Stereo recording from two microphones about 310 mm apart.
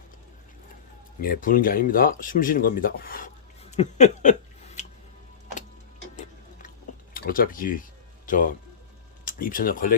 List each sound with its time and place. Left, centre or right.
1.2 s speech: left
3.7 s a sound: left
7.1 s speech: left